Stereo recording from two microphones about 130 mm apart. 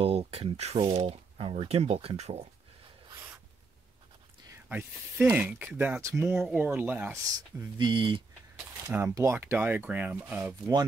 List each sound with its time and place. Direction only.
0.0 s speech: 45° right (ahead or behind)
3.1 s writing: 25° right (ahead or behind)
4.6 s speech: 15° right (ahead or behind)
7.7 s speech: 35° right (ahead or behind)
8.8 s speech: 20° right (ahead or behind)